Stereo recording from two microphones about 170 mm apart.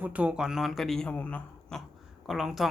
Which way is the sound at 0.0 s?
10° right (ahead or behind).